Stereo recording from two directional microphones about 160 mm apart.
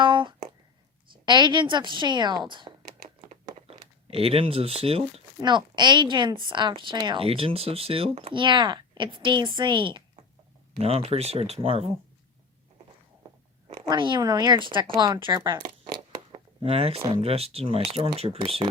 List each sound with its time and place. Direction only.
0.0 s a sound: 30° right (ahead or behind)
1.2 s speech: 30° right (ahead or behind)
3.2 s crumpling: 35° right (ahead or behind)
5.4 s speech: 30° right (ahead or behind)
13.8 s speech: 30° right (ahead or behind)
15.8 s zipper: 30° right (ahead or behind)
17.2 s speech: 40° right (ahead or behind)